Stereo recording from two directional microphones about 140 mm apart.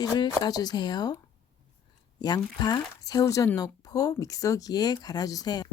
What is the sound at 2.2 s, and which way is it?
Speech, 30° left (ahead or behind).